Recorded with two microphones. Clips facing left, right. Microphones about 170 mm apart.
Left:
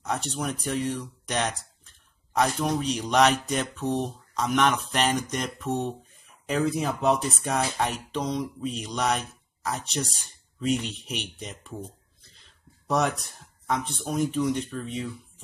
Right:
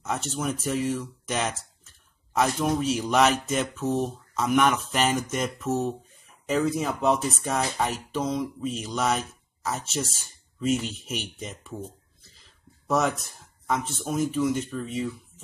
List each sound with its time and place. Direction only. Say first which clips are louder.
0.0 s speech: right 1 dB; centre (ahead or behind)